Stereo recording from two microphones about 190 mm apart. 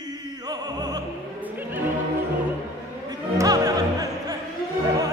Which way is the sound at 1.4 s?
10° right (ahead or behind).